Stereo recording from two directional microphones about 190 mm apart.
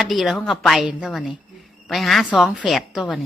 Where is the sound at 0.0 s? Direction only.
Centre (ahead or behind).